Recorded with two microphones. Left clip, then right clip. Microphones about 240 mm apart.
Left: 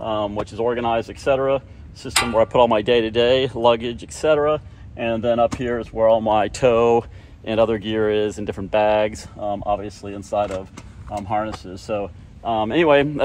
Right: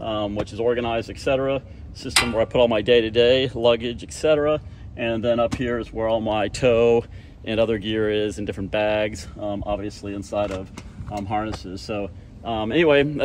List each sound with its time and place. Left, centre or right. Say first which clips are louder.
0.0 s speech: left 2 dB; centre